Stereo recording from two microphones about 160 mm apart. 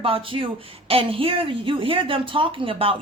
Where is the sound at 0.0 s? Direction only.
35° right (ahead or behind).